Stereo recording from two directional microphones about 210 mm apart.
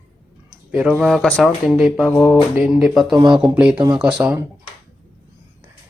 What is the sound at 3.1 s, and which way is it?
Speech, 20° right (ahead or behind).